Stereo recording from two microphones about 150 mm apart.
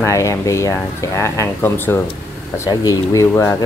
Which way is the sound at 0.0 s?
20° left (ahead or behind).